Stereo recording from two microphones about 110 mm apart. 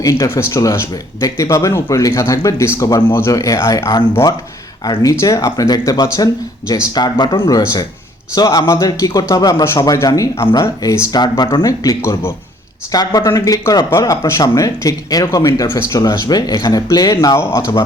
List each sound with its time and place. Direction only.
0.0 s speech: 25° left (ahead or behind)
16.2 s speech: 40° left (ahead or behind)